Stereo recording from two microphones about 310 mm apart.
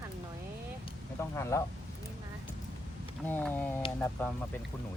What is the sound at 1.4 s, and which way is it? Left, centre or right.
Speech, centre.